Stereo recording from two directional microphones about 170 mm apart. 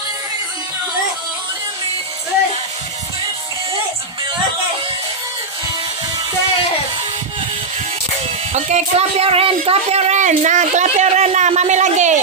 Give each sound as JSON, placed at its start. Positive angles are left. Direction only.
{"t": 8.5, "sound": "speech", "side_deg": -40}